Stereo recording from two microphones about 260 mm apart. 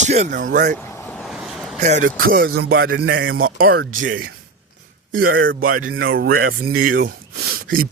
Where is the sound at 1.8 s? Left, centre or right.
Right.